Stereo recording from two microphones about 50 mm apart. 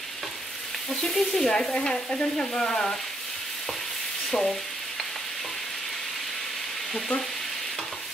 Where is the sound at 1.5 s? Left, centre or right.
Centre.